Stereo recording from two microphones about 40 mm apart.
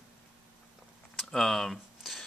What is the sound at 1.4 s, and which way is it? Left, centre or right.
Speech, centre.